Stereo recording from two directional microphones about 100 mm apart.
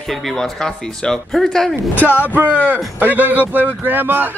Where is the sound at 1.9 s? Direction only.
15° left (ahead or behind).